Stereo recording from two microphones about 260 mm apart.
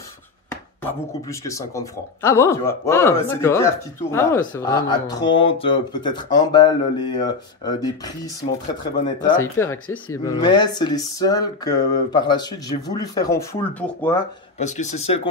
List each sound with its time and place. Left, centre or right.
0.5 s speech: centre
14.6 s speech: left